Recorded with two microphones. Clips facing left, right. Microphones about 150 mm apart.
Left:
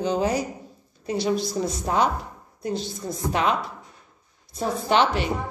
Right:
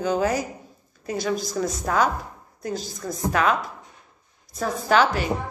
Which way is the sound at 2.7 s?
40° right (ahead or behind).